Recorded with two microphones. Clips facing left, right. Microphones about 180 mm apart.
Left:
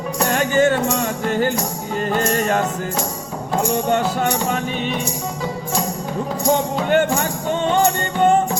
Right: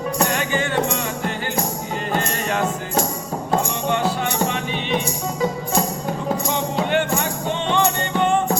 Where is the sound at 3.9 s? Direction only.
45° left (ahead or behind).